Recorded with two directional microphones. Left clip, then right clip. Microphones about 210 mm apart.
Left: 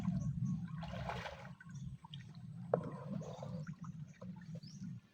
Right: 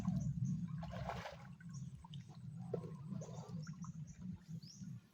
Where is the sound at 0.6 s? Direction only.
10° left (ahead or behind).